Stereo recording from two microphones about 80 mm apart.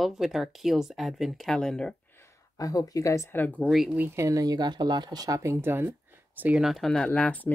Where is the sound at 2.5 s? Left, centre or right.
Left.